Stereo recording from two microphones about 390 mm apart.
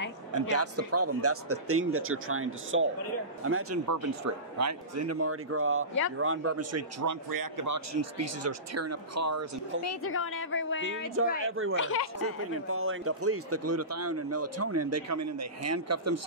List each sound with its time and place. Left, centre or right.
0.3 s a man's voice: right
7.2 s speech: right
9.8 s a woman's voice: left
11.4 s a man's voice: right
11.7 s a woman's voice: left
12.2 s a man's voice: right